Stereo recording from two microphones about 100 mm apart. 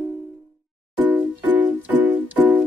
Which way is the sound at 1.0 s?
15° right (ahead or behind).